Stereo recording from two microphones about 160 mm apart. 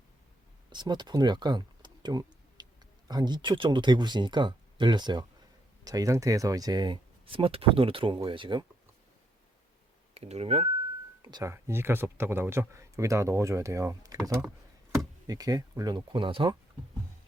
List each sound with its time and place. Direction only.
0.7 s speech: 30° right (ahead or behind)
10.2 s speech: 40° right (ahead or behind)
11.2 s speech: 25° right (ahead or behind)